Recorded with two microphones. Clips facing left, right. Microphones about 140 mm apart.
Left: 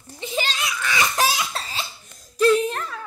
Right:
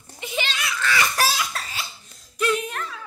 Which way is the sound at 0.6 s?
15° left (ahead or behind).